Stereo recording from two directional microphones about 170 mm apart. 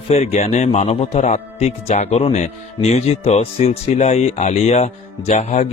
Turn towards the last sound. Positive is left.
turn(degrees=45)  # may be behind; listen again after turning